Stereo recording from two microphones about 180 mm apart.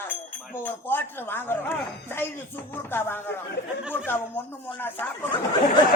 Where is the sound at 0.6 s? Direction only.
10° left (ahead or behind).